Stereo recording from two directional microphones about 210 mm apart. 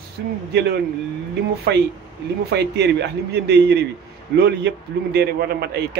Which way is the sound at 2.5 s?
55° right (ahead or behind).